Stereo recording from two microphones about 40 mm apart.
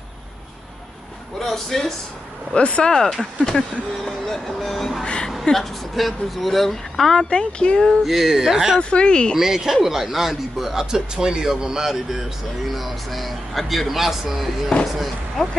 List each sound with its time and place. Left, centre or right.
1.4 s speech: centre
2.5 s speech: left
3.0 s speech: centre
5.0 s a woman's voice: left
5.4 s speech: centre
7.2 s speech: left
8.0 s a man's voice: centre
8.7 s speech: left
9.4 s a man's voice: centre
14.7 s speech: left
15.4 s speech: centre